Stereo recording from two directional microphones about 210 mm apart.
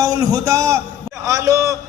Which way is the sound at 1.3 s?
15° right (ahead or behind).